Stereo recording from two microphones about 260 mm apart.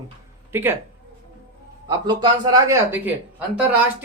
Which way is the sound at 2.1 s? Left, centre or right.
Centre.